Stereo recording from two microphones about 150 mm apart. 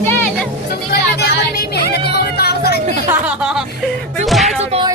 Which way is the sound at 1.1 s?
90° left.